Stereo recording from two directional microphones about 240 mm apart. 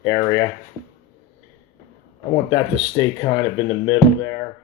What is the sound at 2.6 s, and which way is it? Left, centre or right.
Speech, centre.